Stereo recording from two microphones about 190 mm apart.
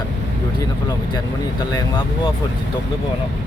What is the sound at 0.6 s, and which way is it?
Speech, 20° left (ahead or behind).